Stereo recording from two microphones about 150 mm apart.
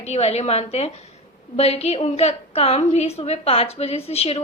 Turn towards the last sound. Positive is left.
turn(degrees=40)  # may be behind; listen again after turning